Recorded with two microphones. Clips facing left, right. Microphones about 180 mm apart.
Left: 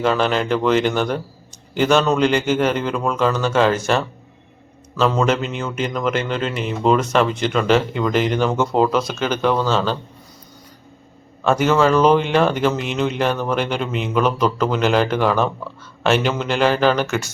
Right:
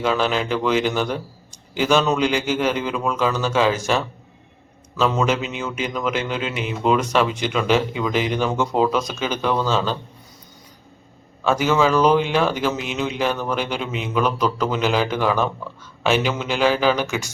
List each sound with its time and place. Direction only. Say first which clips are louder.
0.0 s speech: left 2 dB; 5° right (ahead or behind)
9.0 s speech: left 3 dB; 10° right (ahead or behind)
11.4 s speech: left 2 dB; 5° right (ahead or behind)